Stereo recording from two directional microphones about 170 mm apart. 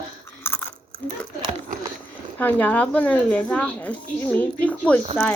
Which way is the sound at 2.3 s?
10° left (ahead or behind).